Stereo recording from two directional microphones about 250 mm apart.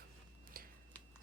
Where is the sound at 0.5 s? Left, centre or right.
Right.